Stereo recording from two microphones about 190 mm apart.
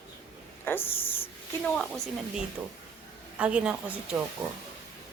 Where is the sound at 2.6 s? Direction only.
15° right (ahead or behind).